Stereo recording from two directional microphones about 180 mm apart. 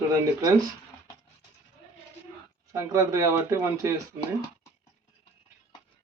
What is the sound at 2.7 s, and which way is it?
Speech, 15° right (ahead or behind).